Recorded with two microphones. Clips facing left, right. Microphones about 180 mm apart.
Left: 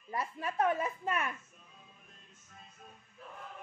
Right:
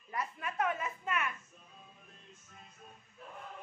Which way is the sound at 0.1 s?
30° left (ahead or behind).